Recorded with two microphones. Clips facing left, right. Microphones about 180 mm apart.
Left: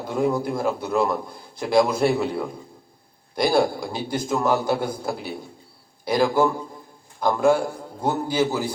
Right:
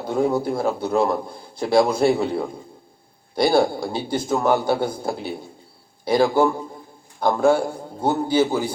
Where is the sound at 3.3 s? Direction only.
25° right (ahead or behind).